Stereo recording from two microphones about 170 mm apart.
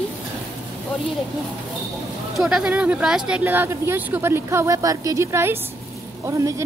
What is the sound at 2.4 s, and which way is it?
Speech, 5° right (ahead or behind).